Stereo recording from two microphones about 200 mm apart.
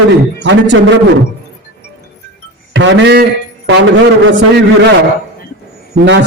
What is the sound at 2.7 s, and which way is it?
A man's voice, 65° right (ahead or behind).